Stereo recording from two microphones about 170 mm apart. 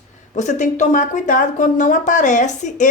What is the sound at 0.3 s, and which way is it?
A woman's voice, 45° left (ahead or behind).